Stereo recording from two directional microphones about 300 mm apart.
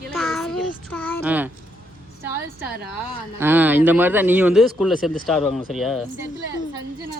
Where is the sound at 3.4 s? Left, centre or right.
Centre.